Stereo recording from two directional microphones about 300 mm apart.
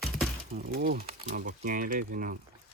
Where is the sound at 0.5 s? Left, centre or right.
Right.